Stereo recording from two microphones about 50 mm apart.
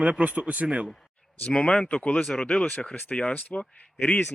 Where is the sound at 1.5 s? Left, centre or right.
Centre.